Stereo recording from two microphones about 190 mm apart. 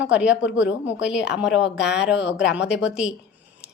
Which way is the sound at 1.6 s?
65° left (ahead or behind).